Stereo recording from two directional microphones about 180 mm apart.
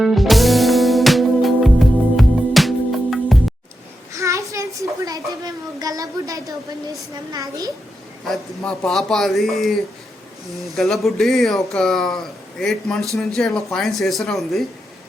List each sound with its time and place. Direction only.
0.0 s music: centre (ahead or behind)
4.1 s a sound: 15° right (ahead or behind)
7.3 s a child's voice: 20° right (ahead or behind)
8.6 s speech: 5° left (ahead or behind)